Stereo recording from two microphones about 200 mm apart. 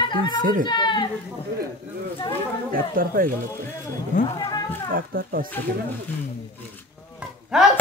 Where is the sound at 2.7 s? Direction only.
45° right (ahead or behind).